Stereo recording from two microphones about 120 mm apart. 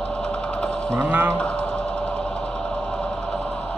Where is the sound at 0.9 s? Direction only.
20° right (ahead or behind).